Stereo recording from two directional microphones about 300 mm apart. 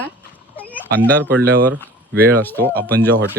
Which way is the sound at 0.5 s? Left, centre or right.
Centre.